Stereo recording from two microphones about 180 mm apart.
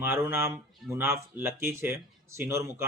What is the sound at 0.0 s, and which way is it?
A man's voice, 15° right (ahead or behind).